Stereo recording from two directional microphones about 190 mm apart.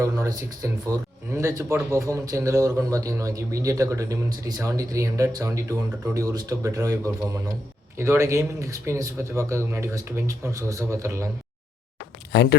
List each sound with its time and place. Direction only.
0.0 s speech: 15° right (ahead or behind)
12.3 s speech: 60° left (ahead or behind)